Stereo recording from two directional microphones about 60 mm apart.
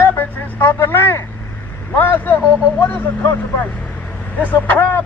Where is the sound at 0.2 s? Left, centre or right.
Left.